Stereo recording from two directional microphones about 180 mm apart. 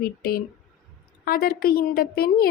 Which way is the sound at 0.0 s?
55° left (ahead or behind).